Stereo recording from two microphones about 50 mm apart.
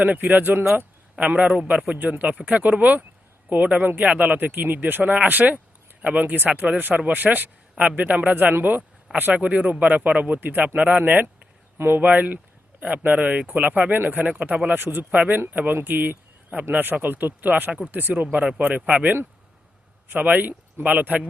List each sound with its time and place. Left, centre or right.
0.0 s speech: right
1.2 s a man's voice: right
2.0 s speech: right
2.2 s a man's voice: right
6.2 s speech: right
10.8 s a man's voice: right
11.8 s speech: right
12.0 s speech: right
14.8 s speech: right
15.1 s a man's voice: right
20.1 s speech: right